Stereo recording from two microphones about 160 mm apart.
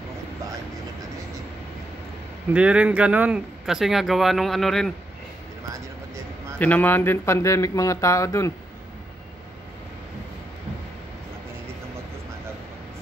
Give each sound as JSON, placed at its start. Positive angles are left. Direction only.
{"t": 2.5, "sound": "speech", "side_deg": -5}
{"t": 6.6, "sound": "speech", "side_deg": 10}